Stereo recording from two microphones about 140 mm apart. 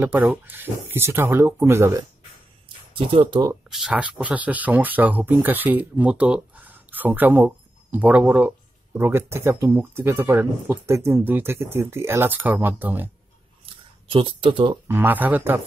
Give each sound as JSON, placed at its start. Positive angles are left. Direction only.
{"t": 0.0, "sound": "speech", "side_deg": -10}
{"t": 2.9, "sound": "speech", "side_deg": -40}
{"t": 3.7, "sound": "speech", "side_deg": -5}
{"t": 14.0, "sound": "speech", "side_deg": -40}
{"t": 14.9, "sound": "speech", "side_deg": -15}